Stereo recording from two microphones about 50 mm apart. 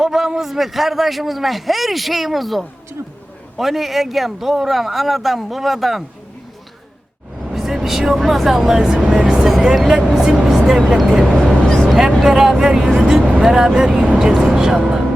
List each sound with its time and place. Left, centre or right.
0.0 s a man's voice: centre
7.4 s speech: centre
9.0 s vehicle: centre
9.7 s music: centre
10.7 s speech: centre
11.6 s vehicle: centre
11.9 s vehicle: centre
12.5 s speech: centre
13.0 s vehicle: centre
13.4 s speech: centre